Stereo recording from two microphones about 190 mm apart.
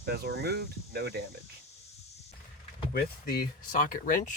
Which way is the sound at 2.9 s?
55° left (ahead or behind).